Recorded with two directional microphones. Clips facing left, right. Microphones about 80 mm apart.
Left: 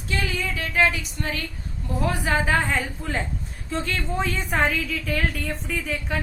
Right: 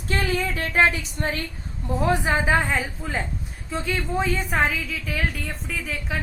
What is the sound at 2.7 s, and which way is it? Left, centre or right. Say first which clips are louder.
A woman's voice: even; centre.